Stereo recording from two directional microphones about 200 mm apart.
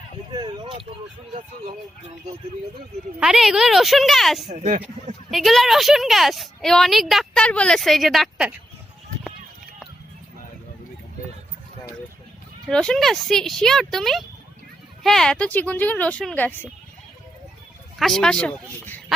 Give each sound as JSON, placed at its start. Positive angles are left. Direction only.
{"t": 0.3, "sound": "speech", "side_deg": -25}
{"t": 3.2, "sound": "a woman's voice", "side_deg": -5}
{"t": 4.5, "sound": "speech", "side_deg": -35}
{"t": 5.3, "sound": "a woman's voice", "side_deg": 0}
{"t": 12.6, "sound": "a woman's voice", "side_deg": 5}
{"t": 18.0, "sound": "a woman's voice", "side_deg": 5}